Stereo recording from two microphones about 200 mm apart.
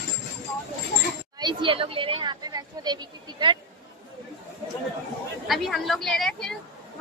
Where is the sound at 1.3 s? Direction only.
25° right (ahead or behind).